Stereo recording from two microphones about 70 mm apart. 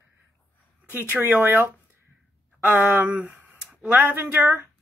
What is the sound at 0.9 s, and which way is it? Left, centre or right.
Speech, right.